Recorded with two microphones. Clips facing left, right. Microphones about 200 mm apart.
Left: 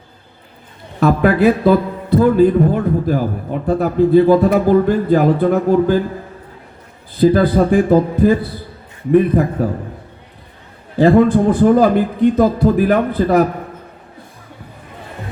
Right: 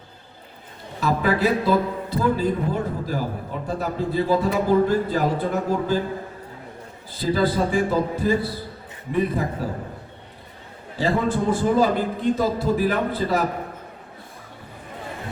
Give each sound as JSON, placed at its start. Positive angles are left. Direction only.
{"t": 0.9, "sound": "a man's voice", "side_deg": 60}
{"t": 7.5, "sound": "a man's voice", "side_deg": 60}
{"t": 10.9, "sound": "a man's voice", "side_deg": 55}